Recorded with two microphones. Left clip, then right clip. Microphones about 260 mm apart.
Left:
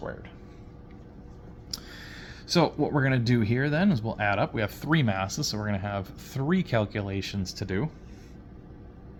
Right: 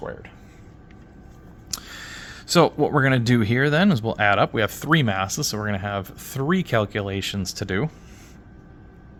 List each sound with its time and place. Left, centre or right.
0.0 s speech: right
1.7 s speech: right